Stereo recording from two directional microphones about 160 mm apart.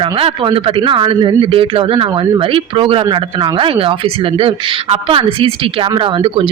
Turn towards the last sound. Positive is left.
turn(degrees=-30)  # may be behind; listen again after turning